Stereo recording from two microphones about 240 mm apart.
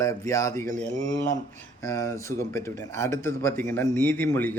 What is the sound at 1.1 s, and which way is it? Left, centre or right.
Speech, left.